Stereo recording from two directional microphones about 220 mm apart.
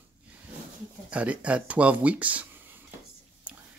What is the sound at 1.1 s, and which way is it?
Speech, 5° right (ahead or behind).